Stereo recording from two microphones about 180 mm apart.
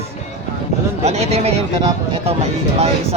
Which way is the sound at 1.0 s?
35° right (ahead or behind).